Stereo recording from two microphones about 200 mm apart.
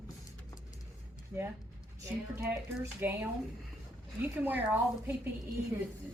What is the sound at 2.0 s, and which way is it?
A woman's voice, 15° right (ahead or behind).